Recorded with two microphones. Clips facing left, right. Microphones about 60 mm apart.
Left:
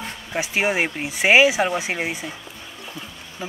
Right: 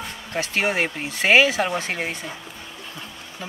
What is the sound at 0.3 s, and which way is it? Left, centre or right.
Speech, centre.